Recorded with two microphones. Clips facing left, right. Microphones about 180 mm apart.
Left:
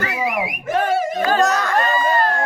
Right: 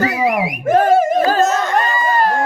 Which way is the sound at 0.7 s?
45° right (ahead or behind).